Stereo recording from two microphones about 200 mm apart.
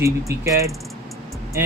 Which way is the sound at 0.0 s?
15° right (ahead or behind).